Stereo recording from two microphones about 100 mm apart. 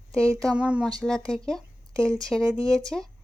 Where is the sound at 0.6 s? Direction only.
10° right (ahead or behind).